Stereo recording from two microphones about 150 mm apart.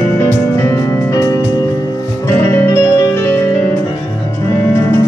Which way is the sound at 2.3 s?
15° left (ahead or behind).